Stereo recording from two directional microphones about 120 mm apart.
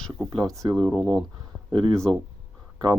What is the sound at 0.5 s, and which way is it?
Speech, 25° right (ahead or behind).